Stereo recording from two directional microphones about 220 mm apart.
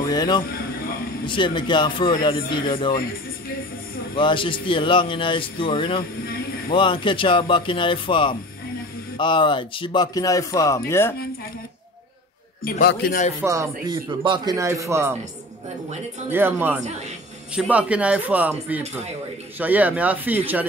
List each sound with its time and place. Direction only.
0.1 s a man's voice: 20° left (ahead or behind)
0.4 s speech: 40° left (ahead or behind)
1.2 s a man's voice: 20° left (ahead or behind)
4.1 s a man's voice: 20° left (ahead or behind)
12.6 s a man's voice: 40° left (ahead or behind)
13.4 s speech: 15° right (ahead or behind)
16.3 s speech: 10° right (ahead or behind)